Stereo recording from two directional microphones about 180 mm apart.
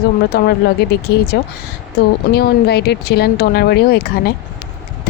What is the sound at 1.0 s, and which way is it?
Speech, 60° left (ahead or behind).